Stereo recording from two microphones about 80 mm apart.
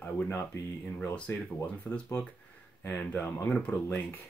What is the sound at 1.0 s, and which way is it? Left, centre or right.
Speech, left.